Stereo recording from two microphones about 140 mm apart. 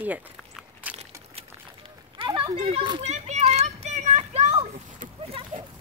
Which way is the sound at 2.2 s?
35° right (ahead or behind).